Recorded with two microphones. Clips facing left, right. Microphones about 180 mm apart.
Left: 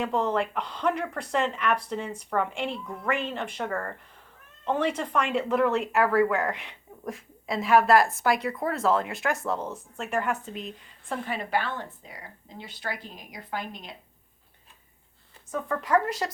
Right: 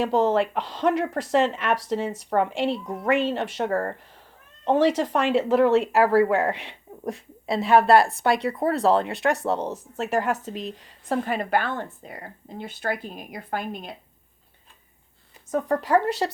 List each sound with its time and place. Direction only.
0.0 s speech: 35° right (ahead or behind)
9.6 s speech: 75° right (ahead or behind)
10.0 s speech: 35° right (ahead or behind); by 13.9 s 55° right (ahead or behind)
15.5 s speech: 35° right (ahead or behind)